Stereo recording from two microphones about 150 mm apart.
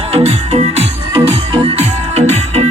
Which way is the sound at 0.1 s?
45° right (ahead or behind).